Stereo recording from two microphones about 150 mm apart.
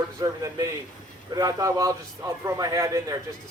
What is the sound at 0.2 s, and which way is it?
A man's voice, 20° right (ahead or behind).